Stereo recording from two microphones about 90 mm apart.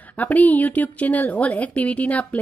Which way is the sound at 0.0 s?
20° left (ahead or behind).